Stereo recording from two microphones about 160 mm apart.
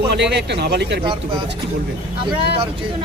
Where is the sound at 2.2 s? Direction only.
30° right (ahead or behind).